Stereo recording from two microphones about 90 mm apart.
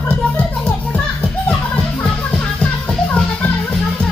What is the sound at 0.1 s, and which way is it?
Music, 15° left (ahead or behind).